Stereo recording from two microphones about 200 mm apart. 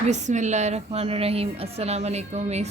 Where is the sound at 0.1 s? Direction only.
35° right (ahead or behind).